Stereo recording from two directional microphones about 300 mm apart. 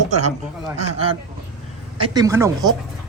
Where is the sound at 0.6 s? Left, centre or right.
Centre.